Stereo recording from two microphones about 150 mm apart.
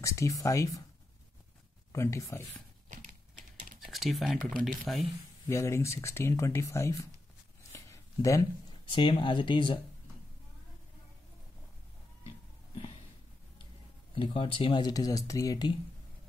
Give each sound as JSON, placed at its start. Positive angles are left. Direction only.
{"t": 0.0, "sound": "speech", "side_deg": 20}
{"t": 1.9, "sound": "speech", "side_deg": 20}
{"t": 3.8, "sound": "speech", "side_deg": 0}
{"t": 5.5, "sound": "speech", "side_deg": 20}
{"t": 7.7, "sound": "a sound", "side_deg": 20}
{"t": 8.9, "sound": "speech", "side_deg": 35}
{"t": 14.1, "sound": "speech", "side_deg": 35}